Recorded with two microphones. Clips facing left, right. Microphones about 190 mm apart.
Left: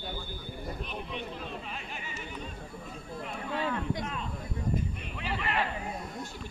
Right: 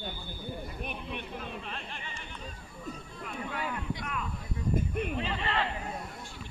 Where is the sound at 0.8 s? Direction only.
55° right (ahead or behind).